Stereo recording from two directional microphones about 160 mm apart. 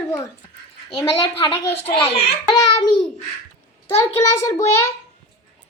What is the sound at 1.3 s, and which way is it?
Speech, 35° left (ahead or behind).